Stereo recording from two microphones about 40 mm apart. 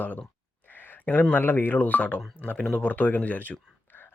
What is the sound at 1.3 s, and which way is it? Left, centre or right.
Speech, left.